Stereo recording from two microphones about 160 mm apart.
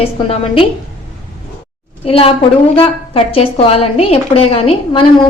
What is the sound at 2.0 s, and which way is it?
A woman's voice, 35° left (ahead or behind).